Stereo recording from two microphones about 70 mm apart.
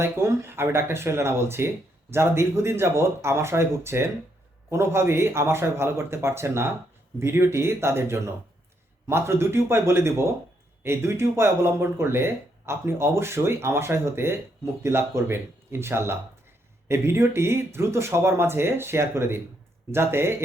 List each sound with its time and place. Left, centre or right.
0.0 s speech: right